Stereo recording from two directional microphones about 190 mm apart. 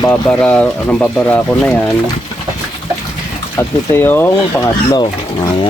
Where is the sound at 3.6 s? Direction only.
10° left (ahead or behind).